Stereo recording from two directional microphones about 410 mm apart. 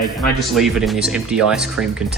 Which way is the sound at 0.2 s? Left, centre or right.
Centre.